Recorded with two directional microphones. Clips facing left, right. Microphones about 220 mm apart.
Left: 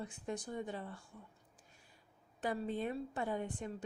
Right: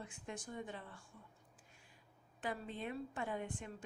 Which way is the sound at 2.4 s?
40° left (ahead or behind).